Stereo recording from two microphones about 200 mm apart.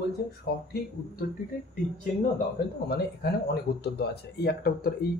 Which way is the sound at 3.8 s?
55° left (ahead or behind).